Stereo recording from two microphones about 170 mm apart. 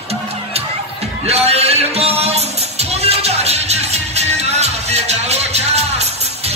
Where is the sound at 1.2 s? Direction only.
35° right (ahead or behind).